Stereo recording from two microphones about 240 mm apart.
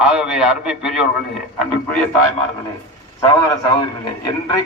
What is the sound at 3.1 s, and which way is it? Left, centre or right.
A man's voice, centre.